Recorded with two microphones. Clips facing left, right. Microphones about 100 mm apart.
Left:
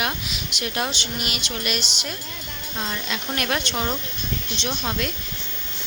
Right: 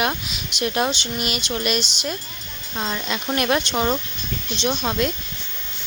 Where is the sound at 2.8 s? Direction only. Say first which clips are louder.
Right 4 dB; 25° right (ahead or behind).